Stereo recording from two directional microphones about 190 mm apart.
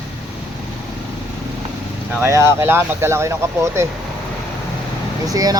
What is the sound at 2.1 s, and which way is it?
Speech, 15° right (ahead or behind).